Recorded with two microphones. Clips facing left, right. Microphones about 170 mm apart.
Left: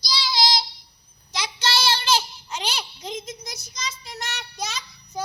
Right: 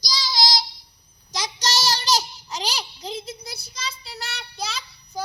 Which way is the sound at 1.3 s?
45° right (ahead or behind).